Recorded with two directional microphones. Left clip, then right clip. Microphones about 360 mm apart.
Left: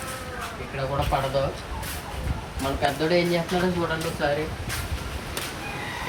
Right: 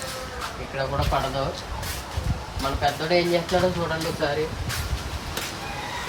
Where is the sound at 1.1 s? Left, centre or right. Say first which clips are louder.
Right 1 dB; centre.